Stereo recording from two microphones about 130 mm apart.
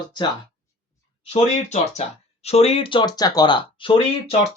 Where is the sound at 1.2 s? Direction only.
55° left (ahead or behind).